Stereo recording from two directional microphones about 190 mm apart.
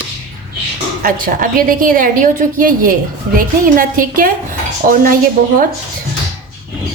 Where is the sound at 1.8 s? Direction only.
45° right (ahead or behind).